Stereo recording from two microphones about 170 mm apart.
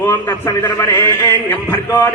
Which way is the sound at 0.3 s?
20° left (ahead or behind).